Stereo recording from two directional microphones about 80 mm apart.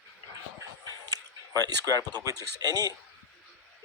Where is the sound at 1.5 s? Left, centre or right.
Right.